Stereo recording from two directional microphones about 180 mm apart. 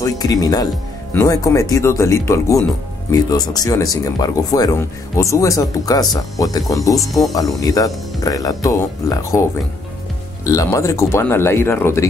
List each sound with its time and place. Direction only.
0.0 s speech: 20° left (ahead or behind)